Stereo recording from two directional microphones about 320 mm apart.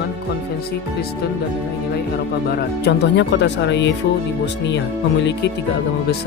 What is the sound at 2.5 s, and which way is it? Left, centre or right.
Speech, left.